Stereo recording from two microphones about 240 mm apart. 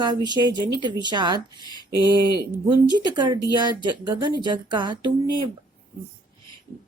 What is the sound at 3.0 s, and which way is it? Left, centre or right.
Speech, centre.